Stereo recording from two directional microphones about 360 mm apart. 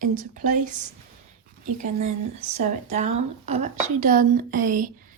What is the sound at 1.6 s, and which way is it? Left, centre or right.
A woman's voice, centre.